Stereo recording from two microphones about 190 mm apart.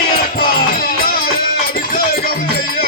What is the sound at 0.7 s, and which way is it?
Music, 50° left (ahead or behind).